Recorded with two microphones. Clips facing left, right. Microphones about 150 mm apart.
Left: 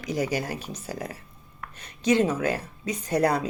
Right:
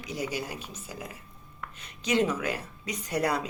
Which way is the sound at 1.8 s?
35° left (ahead or behind).